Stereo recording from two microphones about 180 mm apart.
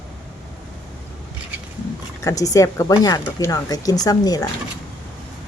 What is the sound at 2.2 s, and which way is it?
Speech, 20° left (ahead or behind).